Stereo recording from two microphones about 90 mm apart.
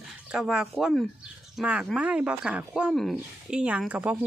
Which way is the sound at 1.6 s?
15° right (ahead or behind).